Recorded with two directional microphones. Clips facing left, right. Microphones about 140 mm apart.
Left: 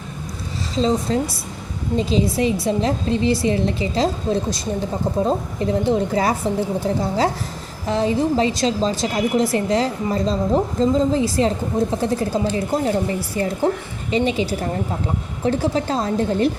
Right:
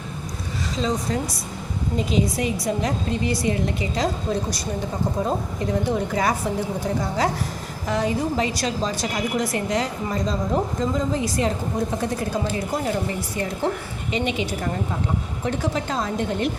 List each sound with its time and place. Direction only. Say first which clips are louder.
0.8 s a woman's voice: left 6 dB; 30° left (ahead or behind)